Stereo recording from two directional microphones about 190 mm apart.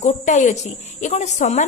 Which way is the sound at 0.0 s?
40° left (ahead or behind).